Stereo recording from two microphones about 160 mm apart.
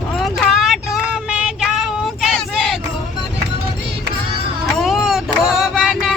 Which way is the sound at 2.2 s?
Centre (ahead or behind).